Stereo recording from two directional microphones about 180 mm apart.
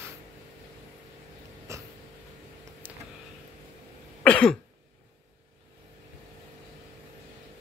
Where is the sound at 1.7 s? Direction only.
15° right (ahead or behind).